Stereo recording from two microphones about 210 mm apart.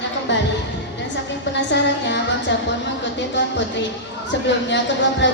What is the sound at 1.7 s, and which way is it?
Music, 55° left (ahead or behind).